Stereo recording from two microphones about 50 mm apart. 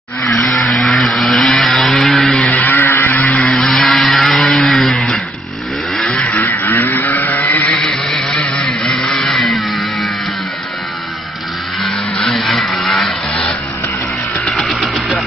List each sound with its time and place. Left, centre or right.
0.4 s vehicle: centre
2.0 s a sound: centre
2.3 s a sound: centre
2.6 s vehicle: left
3.6 s vehicle: centre
6.2 s vehicle: left
7.7 s vehicle: centre
9.4 s music: centre
11.8 s a sound: centre
12.8 s vehicle: centre
14.4 s music: centre